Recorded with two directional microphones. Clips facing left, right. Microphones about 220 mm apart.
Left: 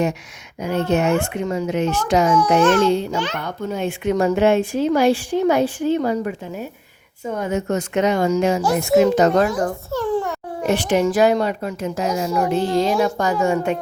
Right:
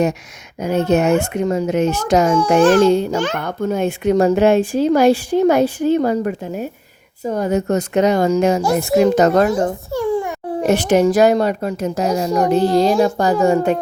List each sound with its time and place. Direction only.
0.6 s a child's voice: 45° right (ahead or behind)
2.6 s a woman's voice: 30° right (ahead or behind)
2.8 s a child's voice: 45° right (ahead or behind)
7.3 s a woman's voice: 35° right (ahead or behind)
9.5 s a child's voice: 25° right (ahead or behind)
9.9 s a sound: 10° right (ahead or behind)
10.6 s a woman's voice: 45° right (ahead or behind)